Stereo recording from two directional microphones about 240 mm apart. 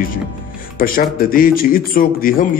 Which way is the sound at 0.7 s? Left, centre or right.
Left.